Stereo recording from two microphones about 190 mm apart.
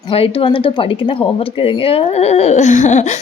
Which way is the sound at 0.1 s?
30° left (ahead or behind).